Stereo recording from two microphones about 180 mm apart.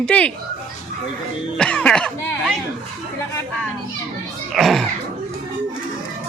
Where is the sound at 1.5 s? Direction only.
5° left (ahead or behind).